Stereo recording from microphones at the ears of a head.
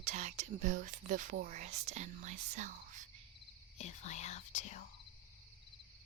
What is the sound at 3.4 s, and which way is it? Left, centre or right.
Speech, left.